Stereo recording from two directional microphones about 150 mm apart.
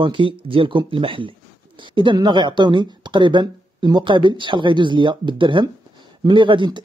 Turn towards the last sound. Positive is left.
turn(degrees=-30)  # may be behind; listen again after turning